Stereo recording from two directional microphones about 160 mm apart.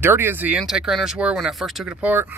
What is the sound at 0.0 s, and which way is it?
Speech, 15° right (ahead or behind).